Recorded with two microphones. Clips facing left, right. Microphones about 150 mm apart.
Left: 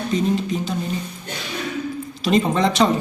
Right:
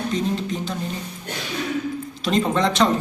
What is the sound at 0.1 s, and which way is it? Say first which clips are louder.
Speech: left 7 dB; 5° left (ahead or behind).